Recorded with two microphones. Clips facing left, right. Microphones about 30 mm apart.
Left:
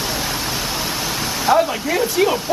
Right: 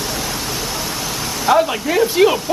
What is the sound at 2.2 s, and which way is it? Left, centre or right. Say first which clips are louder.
Speech: right 4 dB; centre.